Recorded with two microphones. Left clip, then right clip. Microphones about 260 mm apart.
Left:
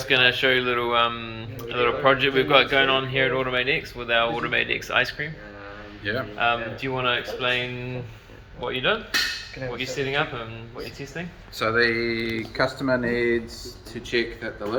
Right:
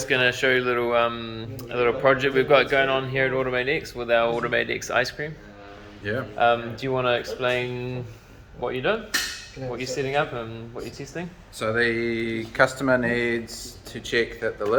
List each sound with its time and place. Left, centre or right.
0.0 s speech: centre
11.6 s speech: centre